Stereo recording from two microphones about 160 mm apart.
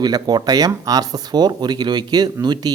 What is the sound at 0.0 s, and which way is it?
Speech, 25° right (ahead or behind).